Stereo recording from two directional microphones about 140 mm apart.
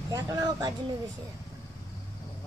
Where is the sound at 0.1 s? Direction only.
25° right (ahead or behind).